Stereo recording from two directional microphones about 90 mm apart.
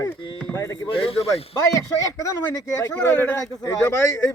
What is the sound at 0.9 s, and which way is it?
Speech, 85° left.